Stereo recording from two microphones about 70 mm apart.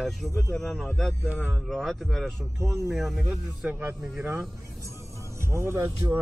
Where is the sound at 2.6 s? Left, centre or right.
Right.